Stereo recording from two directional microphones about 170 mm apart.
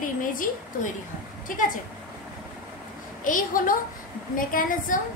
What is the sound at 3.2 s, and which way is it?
A woman's voice, 50° left (ahead or behind).